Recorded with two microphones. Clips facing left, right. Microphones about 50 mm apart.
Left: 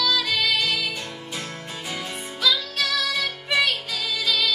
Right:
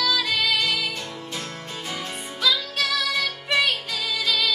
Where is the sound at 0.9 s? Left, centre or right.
Centre.